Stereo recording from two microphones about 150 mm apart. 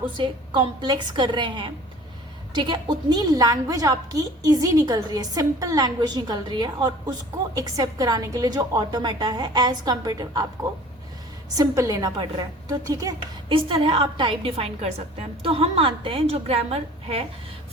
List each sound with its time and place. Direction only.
0.1 s a woman's voice: 30° right (ahead or behind)
11.5 s a woman's voice: 25° right (ahead or behind)
13.5 s a woman's voice: 35° right (ahead or behind)